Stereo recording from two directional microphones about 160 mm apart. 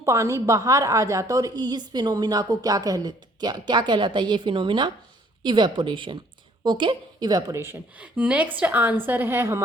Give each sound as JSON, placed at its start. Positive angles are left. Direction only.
{"t": 0.0, "sound": "a woman's voice", "side_deg": -20}